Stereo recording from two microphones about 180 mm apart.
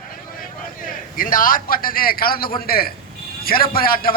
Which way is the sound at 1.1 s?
50° left (ahead or behind).